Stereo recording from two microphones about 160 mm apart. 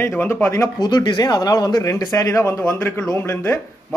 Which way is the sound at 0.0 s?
15° left (ahead or behind).